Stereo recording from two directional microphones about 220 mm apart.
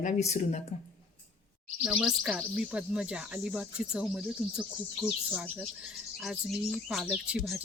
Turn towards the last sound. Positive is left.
turn(degrees=-5)  # may be behind; listen again after turning